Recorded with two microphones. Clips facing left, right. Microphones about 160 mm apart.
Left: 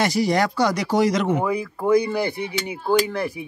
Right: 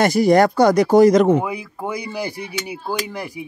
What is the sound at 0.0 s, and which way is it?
Speech, 50° right (ahead or behind).